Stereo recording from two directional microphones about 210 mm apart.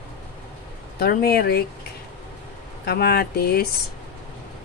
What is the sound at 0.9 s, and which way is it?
Speech, 45° left (ahead or behind).